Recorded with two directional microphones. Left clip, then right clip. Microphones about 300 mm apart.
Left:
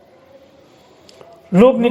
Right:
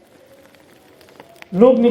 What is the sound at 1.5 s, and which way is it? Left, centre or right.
Speech, left.